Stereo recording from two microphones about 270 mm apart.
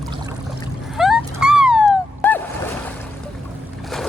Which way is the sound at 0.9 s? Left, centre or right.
Centre.